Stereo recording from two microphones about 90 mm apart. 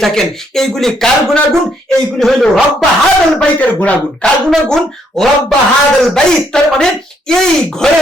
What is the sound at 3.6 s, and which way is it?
Speech, 15° left (ahead or behind).